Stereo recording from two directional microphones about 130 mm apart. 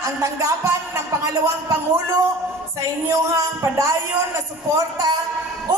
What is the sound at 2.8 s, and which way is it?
A man's voice, 25° right (ahead or behind).